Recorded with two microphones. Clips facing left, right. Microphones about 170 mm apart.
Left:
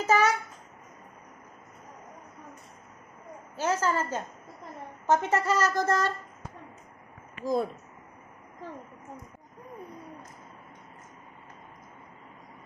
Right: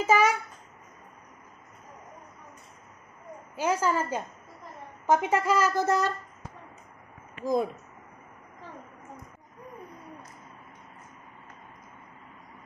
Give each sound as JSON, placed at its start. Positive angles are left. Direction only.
{"t": 0.0, "sound": "a sound", "side_deg": -10}
{"t": 3.5, "sound": "a woman's voice", "side_deg": -10}
{"t": 7.4, "sound": "a woman's voice", "side_deg": -15}